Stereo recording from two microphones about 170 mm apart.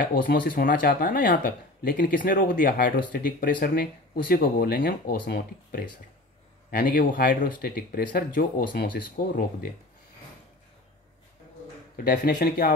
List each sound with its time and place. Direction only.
0.0 s speech: 55° left (ahead or behind)
12.0 s speech: 55° left (ahead or behind)